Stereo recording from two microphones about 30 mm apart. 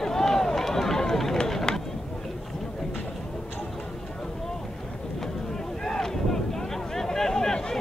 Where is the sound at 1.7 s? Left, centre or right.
Left.